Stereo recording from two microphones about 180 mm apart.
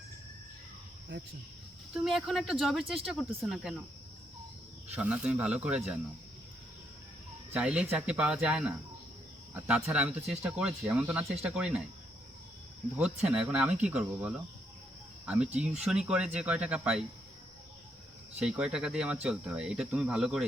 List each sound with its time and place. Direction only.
1.1 s cricket: 85° right
1.9 s speech: 5° right (ahead or behind)
4.9 s speech: 5° right (ahead or behind)
7.5 s speech: 5° right (ahead or behind)
13.0 s speech: 5° right (ahead or behind)
15.6 s speech: 5° right (ahead or behind)
18.3 s speech: 5° right (ahead or behind)